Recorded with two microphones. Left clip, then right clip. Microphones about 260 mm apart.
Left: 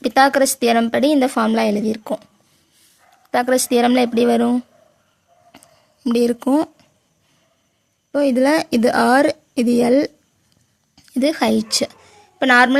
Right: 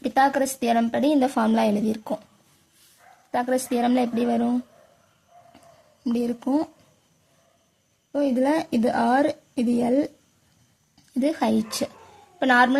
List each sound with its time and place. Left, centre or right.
0.0 s a woman's voice: left
3.3 s a woman's voice: left
6.1 s a woman's voice: left
8.1 s a woman's voice: left